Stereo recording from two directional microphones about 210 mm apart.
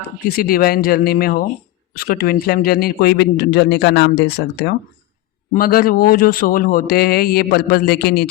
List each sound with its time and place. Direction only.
0.3 s a man's voice: 45° left (ahead or behind)